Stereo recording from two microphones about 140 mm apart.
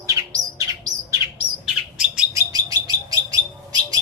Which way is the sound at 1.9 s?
5° right (ahead or behind).